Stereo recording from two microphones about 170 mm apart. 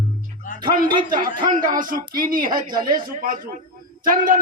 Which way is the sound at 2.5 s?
25° right (ahead or behind).